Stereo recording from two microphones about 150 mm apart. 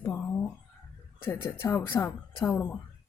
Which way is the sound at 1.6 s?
15° left (ahead or behind).